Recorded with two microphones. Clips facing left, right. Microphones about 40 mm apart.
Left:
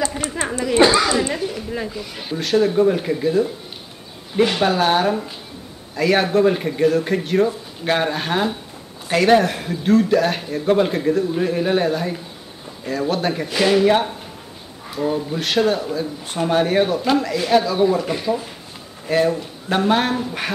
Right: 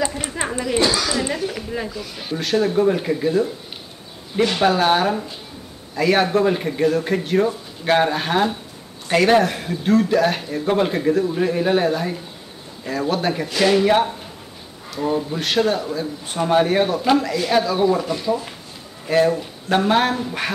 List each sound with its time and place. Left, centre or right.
0.4 s chuckle: right
0.7 s speech: left
2.3 s a man's voice: centre
4.6 s a man's voice: centre
15.1 s a man's voice: centre
18.0 s speech: centre
19.0 s a man's voice: centre